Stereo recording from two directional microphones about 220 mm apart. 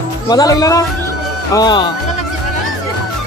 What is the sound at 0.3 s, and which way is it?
Speech, 15° left (ahead or behind).